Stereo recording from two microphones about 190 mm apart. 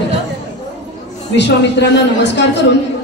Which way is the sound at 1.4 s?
65° left (ahead or behind).